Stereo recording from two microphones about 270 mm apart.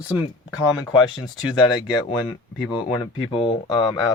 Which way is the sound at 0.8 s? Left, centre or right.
Centre.